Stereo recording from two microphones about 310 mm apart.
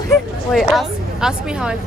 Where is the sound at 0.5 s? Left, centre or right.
Centre.